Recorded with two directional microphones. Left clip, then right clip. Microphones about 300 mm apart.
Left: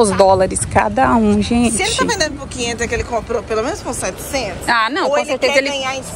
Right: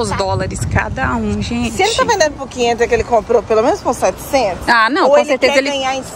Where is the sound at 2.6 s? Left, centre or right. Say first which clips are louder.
Right 7 dB; right.